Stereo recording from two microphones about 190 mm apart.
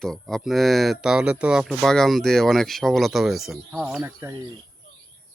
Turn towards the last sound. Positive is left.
turn(degrees=-10)  # may be behind; listen again after turning